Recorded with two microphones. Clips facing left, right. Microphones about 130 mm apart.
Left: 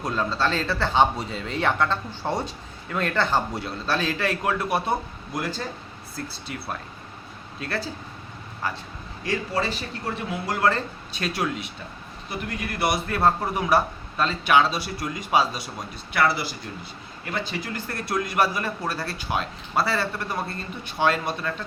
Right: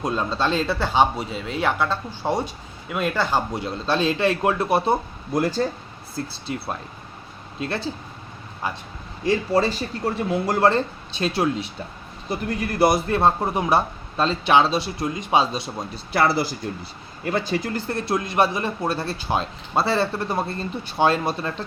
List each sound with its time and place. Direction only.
0.0 s a man's voice: 20° right (ahead or behind)
5.4 s speech: 40° right (ahead or behind)
6.1 s a man's voice: 25° right (ahead or behind)
10.1 s speech: 40° right (ahead or behind)
10.7 s a man's voice: 25° right (ahead or behind)
17.8 s a man's voice: 25° right (ahead or behind)